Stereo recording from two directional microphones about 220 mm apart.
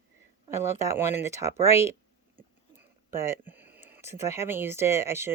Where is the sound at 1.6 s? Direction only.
30° left (ahead or behind).